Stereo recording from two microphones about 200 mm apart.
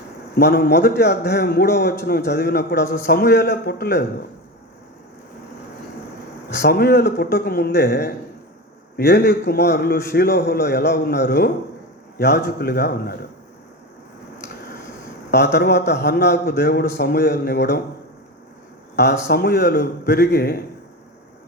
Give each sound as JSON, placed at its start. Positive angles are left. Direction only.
{"t": 0.3, "sound": "a man's voice", "side_deg": 55}
{"t": 6.6, "sound": "a man's voice", "side_deg": 55}
{"t": 15.3, "sound": "a man's voice", "side_deg": 55}
{"t": 18.9, "sound": "a man's voice", "side_deg": 55}